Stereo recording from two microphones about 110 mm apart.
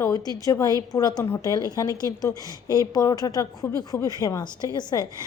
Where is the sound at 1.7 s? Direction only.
35° left (ahead or behind).